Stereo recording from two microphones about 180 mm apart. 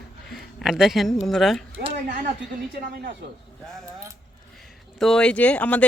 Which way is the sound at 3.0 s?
65° right (ahead or behind).